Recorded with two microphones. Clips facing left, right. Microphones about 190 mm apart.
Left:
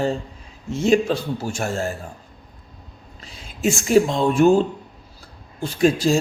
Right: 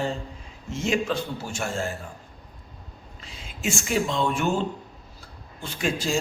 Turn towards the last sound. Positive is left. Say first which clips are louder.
# left 9 dB
turn(degrees=40)  # may be behind; listen again after turning